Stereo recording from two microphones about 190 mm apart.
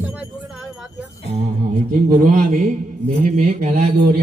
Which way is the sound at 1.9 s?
45° right (ahead or behind).